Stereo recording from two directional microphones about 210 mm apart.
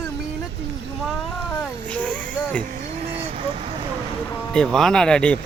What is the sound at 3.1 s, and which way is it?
Vehicle, 30° right (ahead or behind).